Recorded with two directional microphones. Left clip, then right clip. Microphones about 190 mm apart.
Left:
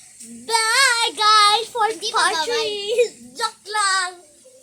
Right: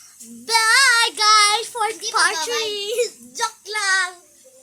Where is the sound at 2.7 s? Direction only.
45° right (ahead or behind).